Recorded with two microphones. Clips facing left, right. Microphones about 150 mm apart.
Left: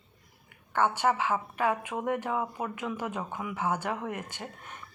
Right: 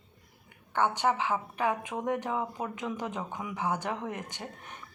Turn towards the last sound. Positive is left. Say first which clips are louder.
# even
turn(degrees=-15)  # may be behind; listen again after turning